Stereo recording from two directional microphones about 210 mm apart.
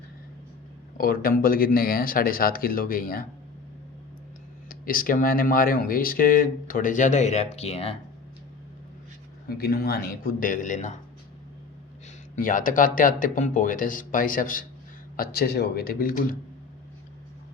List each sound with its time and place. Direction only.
0.9 s speech: 45° left (ahead or behind)
4.7 s speech: 40° left (ahead or behind)
9.6 s speech: 45° left (ahead or behind)
12.4 s speech: 40° left (ahead or behind)